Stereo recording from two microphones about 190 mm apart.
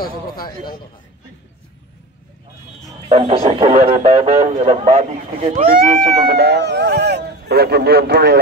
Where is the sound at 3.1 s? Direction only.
30° right (ahead or behind).